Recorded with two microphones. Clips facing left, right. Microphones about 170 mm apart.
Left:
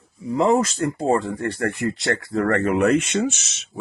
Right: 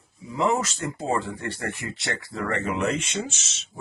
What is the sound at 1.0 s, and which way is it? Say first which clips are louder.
Speech: left 5 dB; 50° left (ahead or behind).